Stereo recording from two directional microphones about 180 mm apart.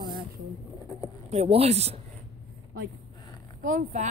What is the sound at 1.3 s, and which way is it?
Speech, 35° right (ahead or behind).